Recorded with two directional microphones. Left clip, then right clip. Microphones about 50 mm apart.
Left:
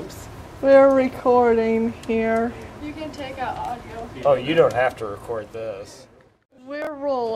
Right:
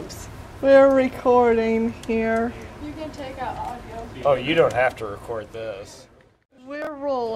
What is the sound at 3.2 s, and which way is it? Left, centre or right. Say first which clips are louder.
Speech: left 3 dB; centre.